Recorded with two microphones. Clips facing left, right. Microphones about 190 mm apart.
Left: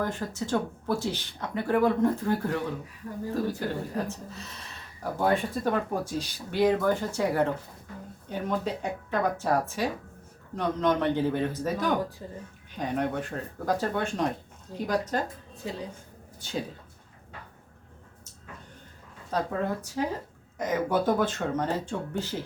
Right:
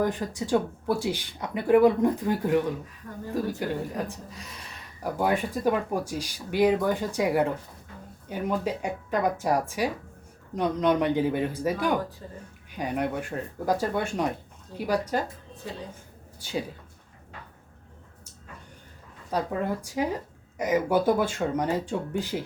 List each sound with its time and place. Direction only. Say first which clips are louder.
0.0 s speech: right 3 dB; 15° right (ahead or behind)
12.2 s speech: left 2 dB; 15° left (ahead or behind)
12.7 s speech: even; 10° right (ahead or behind)
16.4 s speech: right 2 dB; 10° right (ahead or behind)
19.3 s speech: right 1 dB; 10° right (ahead or behind)